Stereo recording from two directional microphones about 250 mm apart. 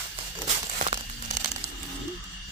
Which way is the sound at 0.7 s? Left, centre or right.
Right.